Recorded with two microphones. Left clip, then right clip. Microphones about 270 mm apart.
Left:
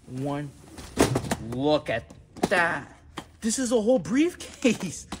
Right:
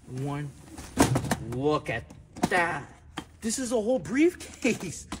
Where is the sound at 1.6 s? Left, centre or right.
Left.